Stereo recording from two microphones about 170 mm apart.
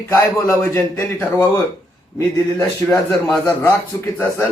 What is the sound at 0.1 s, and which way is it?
A man's voice, 15° left (ahead or behind).